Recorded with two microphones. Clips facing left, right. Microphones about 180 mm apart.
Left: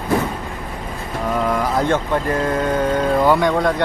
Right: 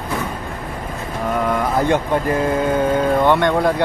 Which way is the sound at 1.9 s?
10° right (ahead or behind).